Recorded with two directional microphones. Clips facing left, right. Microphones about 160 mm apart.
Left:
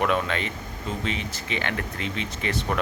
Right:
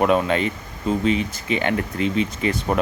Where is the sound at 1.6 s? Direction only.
20° right (ahead or behind).